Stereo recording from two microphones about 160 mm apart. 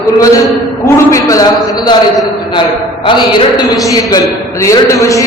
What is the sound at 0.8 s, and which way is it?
A man's voice, 20° left (ahead or behind).